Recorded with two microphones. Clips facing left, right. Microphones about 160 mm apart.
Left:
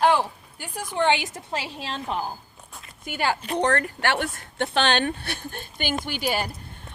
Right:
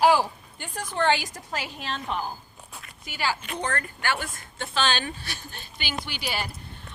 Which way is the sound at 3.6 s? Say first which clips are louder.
Left 7 dB; 70° left (ahead or behind).